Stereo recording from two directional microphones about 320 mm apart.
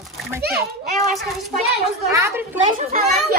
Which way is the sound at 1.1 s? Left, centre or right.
Centre.